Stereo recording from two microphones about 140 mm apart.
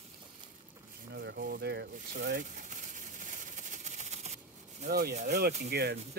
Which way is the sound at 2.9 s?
65° right (ahead or behind).